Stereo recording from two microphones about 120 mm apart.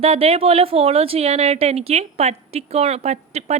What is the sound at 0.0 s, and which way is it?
A woman's voice, 55° right (ahead or behind).